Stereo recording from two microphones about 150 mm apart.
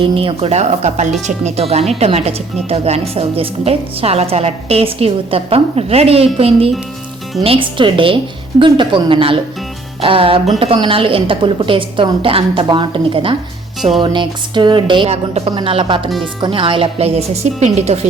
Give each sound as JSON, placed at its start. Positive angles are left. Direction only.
{"t": 0.0, "sound": "a woman's voice", "side_deg": -35}